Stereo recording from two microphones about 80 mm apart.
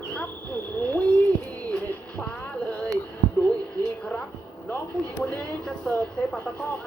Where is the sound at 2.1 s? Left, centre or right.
Centre.